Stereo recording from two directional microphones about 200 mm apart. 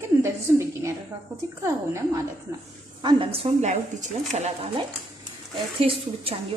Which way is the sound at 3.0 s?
25° right (ahead or behind).